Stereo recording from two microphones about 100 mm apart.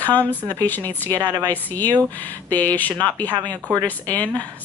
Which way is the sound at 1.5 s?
15° left (ahead or behind).